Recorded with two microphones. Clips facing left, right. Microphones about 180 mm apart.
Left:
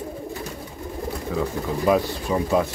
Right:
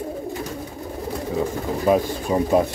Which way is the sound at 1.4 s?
30° right (ahead or behind).